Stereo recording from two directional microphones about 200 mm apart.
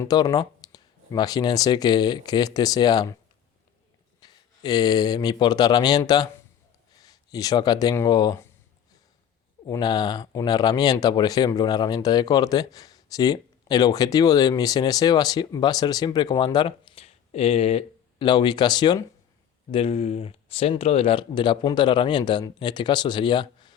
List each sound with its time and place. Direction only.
0.0 s speech: 20° left (ahead or behind)
4.2 s speech: 20° left (ahead or behind)
9.6 s speech: 20° left (ahead or behind)